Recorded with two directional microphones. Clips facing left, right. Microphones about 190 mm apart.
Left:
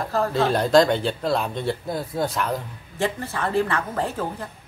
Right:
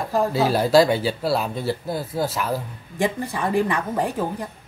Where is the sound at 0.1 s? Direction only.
10° right (ahead or behind).